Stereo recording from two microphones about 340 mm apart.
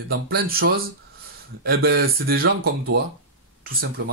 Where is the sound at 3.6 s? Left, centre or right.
Right.